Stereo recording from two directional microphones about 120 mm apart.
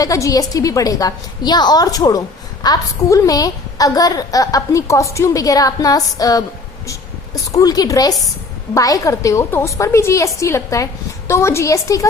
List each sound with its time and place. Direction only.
0.0 s a woman's voice: 30° left (ahead or behind)
7.5 s a woman's voice: 30° left (ahead or behind)